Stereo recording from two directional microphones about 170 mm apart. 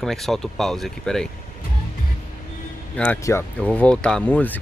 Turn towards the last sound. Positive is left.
turn(degrees=10)  # may be behind; listen again after turning